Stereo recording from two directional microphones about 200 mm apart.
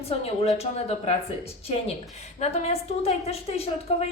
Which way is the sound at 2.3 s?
30° left (ahead or behind).